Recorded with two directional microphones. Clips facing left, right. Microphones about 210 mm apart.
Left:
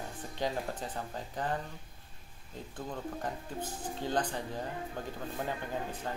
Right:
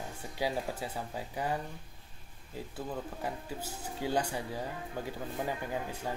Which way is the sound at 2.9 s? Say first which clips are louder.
Left 1 dB; 10° right (ahead or behind).